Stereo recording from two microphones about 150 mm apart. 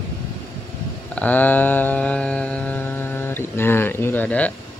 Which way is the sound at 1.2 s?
10° left (ahead or behind).